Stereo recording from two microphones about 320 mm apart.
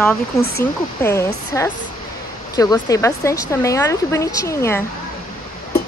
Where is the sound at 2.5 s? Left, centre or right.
Centre.